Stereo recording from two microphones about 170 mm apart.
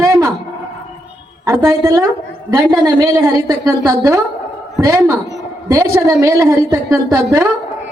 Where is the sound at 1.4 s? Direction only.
20° right (ahead or behind).